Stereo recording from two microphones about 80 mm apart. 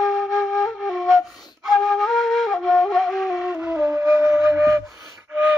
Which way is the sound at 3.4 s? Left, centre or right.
Centre.